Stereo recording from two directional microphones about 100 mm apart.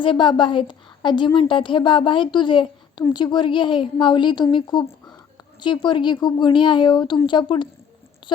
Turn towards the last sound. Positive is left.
turn(degrees=55)  # may be behind; listen again after turning